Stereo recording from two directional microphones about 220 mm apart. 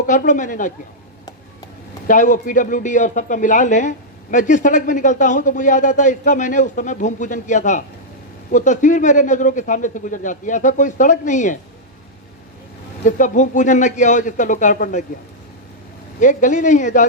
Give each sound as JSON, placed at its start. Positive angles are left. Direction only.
{"t": 0.0, "sound": "speech", "side_deg": 35}
{"t": 2.0, "sound": "speech", "side_deg": 35}
{"t": 13.1, "sound": "speech", "side_deg": 35}
{"t": 16.2, "sound": "speech", "side_deg": 35}